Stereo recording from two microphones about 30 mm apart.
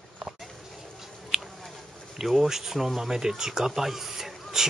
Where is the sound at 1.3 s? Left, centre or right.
Right.